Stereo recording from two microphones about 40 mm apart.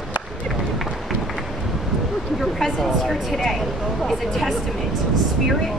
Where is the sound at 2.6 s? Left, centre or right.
Centre.